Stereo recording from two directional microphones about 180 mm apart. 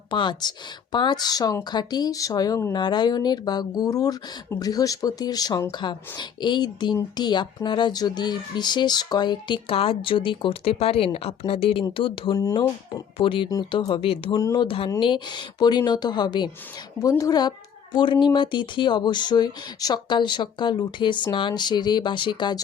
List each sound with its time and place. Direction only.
0.1 s speech: 25° left (ahead or behind)
12.4 s speech: 20° left (ahead or behind)
13.1 s speech: 30° left (ahead or behind)